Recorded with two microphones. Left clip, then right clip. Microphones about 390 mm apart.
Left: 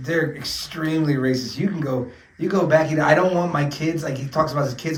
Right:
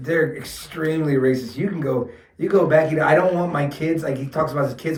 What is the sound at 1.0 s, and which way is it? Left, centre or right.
Speech, centre.